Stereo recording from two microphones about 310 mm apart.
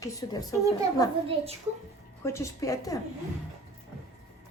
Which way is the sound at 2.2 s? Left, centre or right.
Centre.